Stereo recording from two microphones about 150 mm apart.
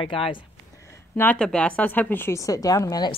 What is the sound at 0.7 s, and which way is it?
A woman's voice, 20° left (ahead or behind).